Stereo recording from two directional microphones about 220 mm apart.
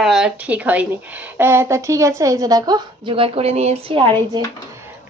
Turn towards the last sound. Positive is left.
turn(degrees=-20)  # may be behind; listen again after turning